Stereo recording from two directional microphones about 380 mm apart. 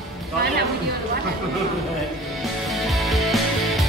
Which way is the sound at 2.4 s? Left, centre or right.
Centre.